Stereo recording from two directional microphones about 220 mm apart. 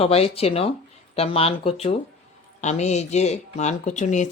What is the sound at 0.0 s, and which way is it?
Speech, 25° left (ahead or behind).